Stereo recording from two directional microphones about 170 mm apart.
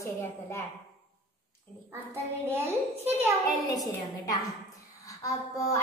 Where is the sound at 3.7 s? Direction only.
20° left (ahead or behind).